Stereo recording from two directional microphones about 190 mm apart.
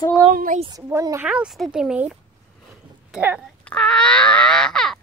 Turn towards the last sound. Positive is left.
turn(degrees=5)  # may be behind; listen again after turning